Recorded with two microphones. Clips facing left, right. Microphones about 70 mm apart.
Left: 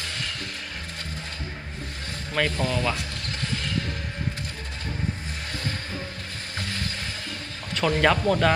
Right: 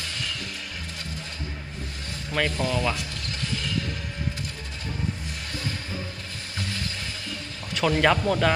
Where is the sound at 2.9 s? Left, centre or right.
Left.